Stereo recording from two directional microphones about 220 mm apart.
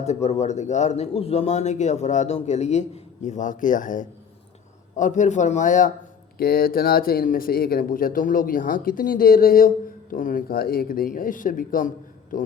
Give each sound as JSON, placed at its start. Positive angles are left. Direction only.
{"t": 0.0, "sound": "speech", "side_deg": 30}